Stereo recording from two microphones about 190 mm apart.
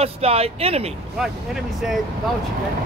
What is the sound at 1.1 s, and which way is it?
Speech, centre (ahead or behind).